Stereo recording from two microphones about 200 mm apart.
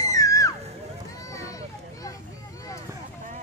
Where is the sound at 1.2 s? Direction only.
15° left (ahead or behind).